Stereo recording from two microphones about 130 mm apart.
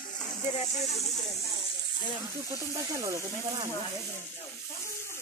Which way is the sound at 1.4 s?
45° left (ahead or behind).